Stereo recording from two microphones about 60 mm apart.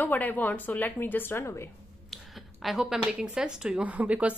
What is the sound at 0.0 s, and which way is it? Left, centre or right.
Speech, left.